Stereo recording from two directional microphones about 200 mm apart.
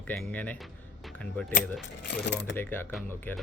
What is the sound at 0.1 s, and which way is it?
Speech, 10° left (ahead or behind).